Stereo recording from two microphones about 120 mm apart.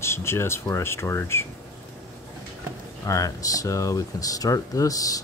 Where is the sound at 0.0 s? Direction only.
20° left (ahead or behind).